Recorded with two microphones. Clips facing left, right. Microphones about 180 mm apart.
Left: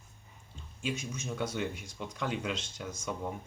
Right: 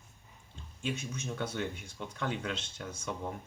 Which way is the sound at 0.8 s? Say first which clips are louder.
Left 1 dB; 10° left (ahead or behind).